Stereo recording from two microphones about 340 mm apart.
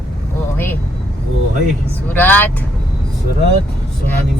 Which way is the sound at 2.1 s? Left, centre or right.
Centre.